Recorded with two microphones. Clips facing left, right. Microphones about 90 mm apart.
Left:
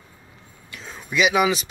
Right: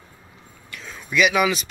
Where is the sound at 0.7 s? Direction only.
30° left (ahead or behind).